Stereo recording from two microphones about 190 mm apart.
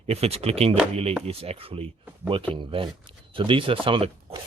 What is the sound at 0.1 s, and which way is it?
Speech, 35° right (ahead or behind).